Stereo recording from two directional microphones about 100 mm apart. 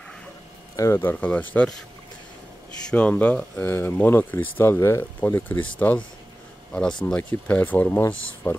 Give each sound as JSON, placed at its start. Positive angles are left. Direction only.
{"t": 0.7, "sound": "speech", "side_deg": 25}
{"t": 2.9, "sound": "speech", "side_deg": 15}
{"t": 6.7, "sound": "speech", "side_deg": 10}